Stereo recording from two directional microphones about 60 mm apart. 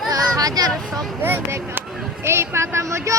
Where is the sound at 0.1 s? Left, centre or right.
Right.